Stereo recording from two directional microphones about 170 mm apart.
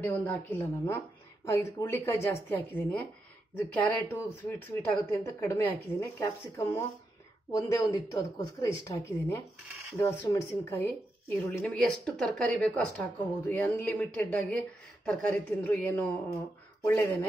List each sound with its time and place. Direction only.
0.0 s a woman's voice: 10° left (ahead or behind)
11.2 s a woman's voice: 5° left (ahead or behind)